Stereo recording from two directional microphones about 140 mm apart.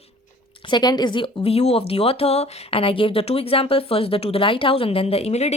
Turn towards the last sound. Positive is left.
turn(degrees=50)  # may be behind; listen again after turning